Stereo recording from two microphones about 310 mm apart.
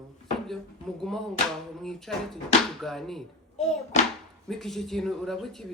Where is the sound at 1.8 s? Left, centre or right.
Centre.